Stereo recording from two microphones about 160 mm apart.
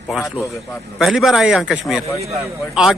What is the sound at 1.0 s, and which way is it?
Speech, centre (ahead or behind).